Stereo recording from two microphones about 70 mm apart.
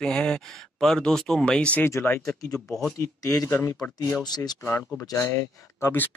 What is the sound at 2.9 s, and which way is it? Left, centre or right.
Speech, left.